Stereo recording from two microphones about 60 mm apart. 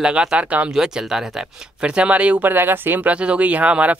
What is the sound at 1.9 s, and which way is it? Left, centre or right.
Speech, centre.